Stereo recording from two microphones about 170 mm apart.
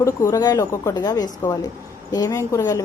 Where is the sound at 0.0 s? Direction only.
20° left (ahead or behind).